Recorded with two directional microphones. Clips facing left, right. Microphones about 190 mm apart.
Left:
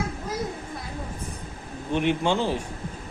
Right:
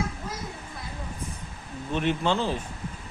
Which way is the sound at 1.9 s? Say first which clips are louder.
Left 2 dB; 15° left (ahead or behind).